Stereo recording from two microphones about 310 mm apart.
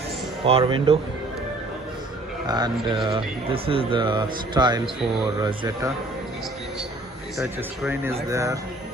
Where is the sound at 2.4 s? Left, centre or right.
Centre.